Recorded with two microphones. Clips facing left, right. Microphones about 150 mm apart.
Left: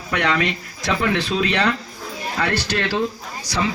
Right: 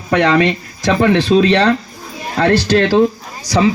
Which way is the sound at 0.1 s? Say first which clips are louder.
Right 9 dB; 30° right (ahead or behind).